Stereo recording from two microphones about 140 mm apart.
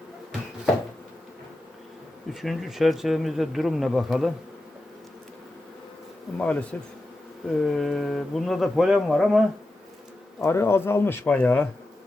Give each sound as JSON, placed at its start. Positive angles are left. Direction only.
{"t": 2.3, "sound": "speech", "side_deg": 0}
{"t": 6.3, "sound": "speech", "side_deg": 10}
{"t": 10.4, "sound": "speech", "side_deg": 20}